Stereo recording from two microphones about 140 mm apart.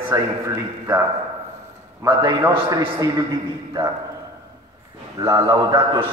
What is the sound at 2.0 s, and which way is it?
A man's voice, 25° right (ahead or behind).